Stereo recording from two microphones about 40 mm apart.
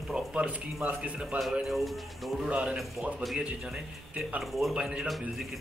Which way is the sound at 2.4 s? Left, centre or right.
Right.